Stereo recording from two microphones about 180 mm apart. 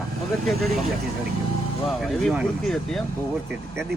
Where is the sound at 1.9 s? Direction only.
Centre (ahead or behind).